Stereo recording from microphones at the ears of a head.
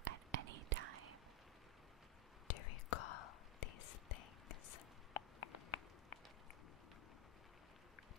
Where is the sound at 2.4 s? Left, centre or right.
Left.